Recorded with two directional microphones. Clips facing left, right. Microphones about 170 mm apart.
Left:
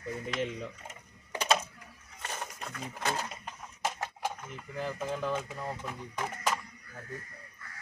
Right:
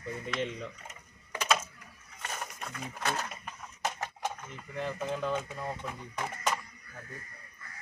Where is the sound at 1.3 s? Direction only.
30° left (ahead or behind).